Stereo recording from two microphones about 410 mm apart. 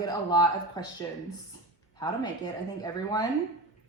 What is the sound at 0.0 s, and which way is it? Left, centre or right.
A woman's voice, centre.